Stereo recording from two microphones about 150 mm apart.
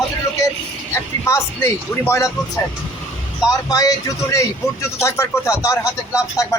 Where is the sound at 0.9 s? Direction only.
20° left (ahead or behind).